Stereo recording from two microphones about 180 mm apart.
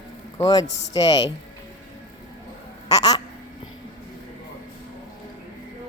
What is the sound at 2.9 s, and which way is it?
Speech, 20° left (ahead or behind).